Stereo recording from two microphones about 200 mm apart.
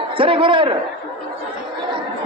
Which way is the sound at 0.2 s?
25° right (ahead or behind).